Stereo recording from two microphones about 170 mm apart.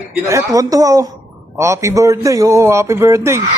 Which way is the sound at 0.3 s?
20° right (ahead or behind).